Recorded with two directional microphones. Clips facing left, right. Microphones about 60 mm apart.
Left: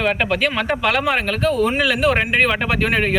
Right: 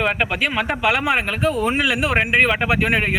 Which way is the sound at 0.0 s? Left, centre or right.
Centre.